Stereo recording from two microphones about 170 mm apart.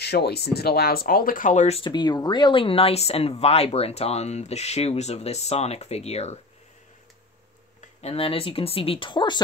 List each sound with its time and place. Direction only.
0.0 s speech: 70° left (ahead or behind); by 1.9 s 40° left (ahead or behind)
1.9 s speech: 25° left (ahead or behind)
8.0 s speech: 35° left (ahead or behind)